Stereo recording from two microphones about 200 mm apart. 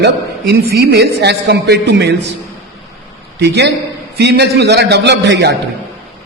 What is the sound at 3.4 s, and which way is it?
A man's voice, 60° right (ahead or behind).